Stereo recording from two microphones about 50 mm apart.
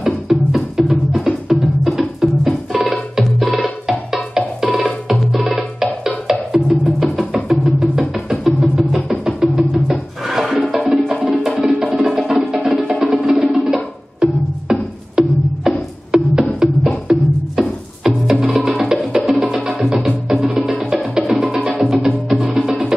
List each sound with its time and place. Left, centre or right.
0.0 s music: centre
3.4 s music: right
3.9 s music: centre
9.4 s music: centre
20.8 s music: centre
21.3 s music: centre
21.6 s music: centre
21.9 s music: centre